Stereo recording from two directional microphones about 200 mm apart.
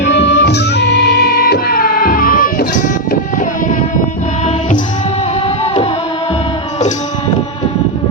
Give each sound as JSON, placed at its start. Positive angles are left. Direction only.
{"t": 0.0, "sound": "music", "side_deg": 60}